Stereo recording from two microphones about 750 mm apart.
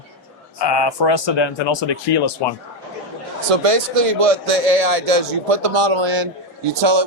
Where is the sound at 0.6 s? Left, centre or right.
Left.